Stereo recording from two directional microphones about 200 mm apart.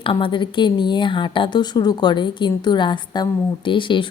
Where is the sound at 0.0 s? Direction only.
25° left (ahead or behind).